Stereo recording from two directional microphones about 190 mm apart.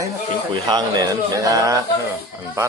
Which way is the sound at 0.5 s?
20° right (ahead or behind).